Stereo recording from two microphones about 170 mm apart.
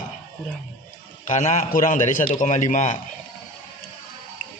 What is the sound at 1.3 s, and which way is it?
A man's voice, 45° left (ahead or behind).